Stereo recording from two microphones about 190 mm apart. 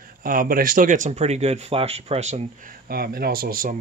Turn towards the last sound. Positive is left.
turn(degrees=-50)  # may be behind; listen again after turning